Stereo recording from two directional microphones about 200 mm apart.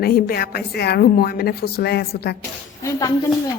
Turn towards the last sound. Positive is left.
turn(degrees=15)  # may be behind; listen again after turning